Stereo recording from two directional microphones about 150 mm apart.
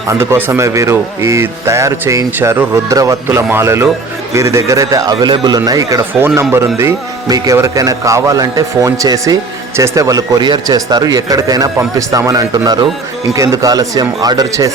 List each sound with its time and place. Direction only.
0.1 s a man's voice: 15° right (ahead or behind)